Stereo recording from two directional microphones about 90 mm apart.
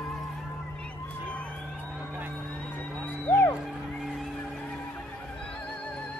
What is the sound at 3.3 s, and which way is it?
Music, 25° left (ahead or behind).